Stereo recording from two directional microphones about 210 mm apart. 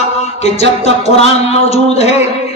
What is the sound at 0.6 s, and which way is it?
A man's voice, 30° left (ahead or behind).